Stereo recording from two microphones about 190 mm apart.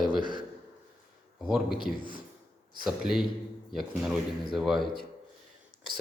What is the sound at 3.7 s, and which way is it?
Speech, centre (ahead or behind).